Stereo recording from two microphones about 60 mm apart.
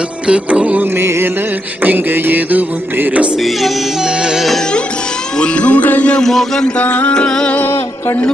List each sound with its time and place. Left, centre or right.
0.3 s music: right
0.9 s music: right
1.8 s music: right
3.4 s music: centre
5.4 s music: left
6.2 s music: centre
6.7 s music: left
7.5 s music: left